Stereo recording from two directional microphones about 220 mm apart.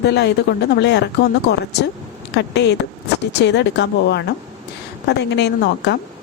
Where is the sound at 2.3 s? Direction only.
50° left (ahead or behind).